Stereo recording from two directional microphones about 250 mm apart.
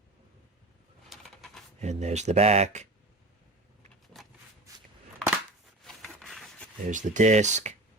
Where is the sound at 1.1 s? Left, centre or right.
Centre.